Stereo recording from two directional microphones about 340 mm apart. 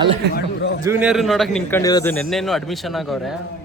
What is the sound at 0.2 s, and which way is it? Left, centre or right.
Speech, right.